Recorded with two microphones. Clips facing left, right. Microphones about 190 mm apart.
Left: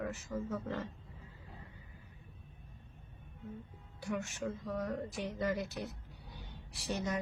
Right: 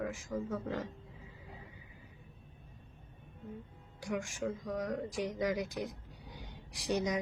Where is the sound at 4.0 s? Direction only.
10° right (ahead or behind).